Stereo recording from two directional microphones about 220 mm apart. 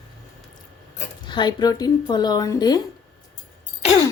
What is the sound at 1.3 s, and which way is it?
Speech, 20° left (ahead or behind).